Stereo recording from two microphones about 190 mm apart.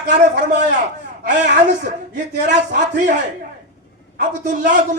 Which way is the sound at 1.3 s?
40° right (ahead or behind).